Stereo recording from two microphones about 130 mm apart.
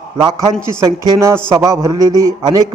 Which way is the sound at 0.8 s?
25° right (ahead or behind).